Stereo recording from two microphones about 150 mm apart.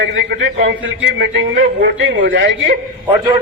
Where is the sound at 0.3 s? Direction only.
90° right.